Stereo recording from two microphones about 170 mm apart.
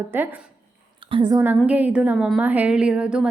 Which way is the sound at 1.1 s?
25° right (ahead or behind).